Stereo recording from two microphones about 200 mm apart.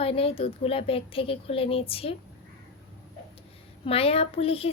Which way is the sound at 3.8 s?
30° left (ahead or behind).